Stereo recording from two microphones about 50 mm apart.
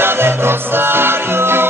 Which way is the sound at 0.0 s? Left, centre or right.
Right.